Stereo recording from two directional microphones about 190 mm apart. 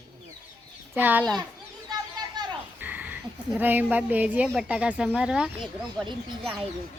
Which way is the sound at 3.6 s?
10° right (ahead or behind).